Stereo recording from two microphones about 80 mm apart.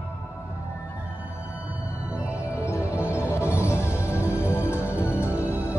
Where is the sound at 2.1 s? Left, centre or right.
Centre.